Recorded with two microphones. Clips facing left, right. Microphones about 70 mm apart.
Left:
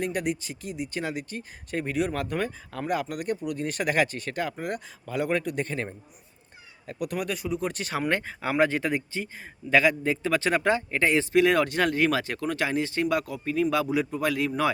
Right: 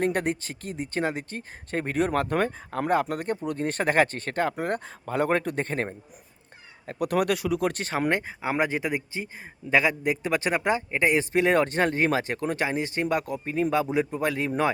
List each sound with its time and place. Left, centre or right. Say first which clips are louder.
0.0 s speech: right 3 dB; right
7.1 s speech: right 7 dB; right
7.7 s speech: right 2 dB; right
8.1 s speech: even; centre